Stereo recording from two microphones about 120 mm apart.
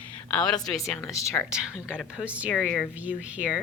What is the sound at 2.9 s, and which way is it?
Speech, 10° right (ahead or behind).